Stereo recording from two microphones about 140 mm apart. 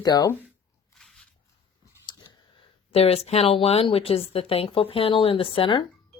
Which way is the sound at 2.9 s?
45° left (ahead or behind).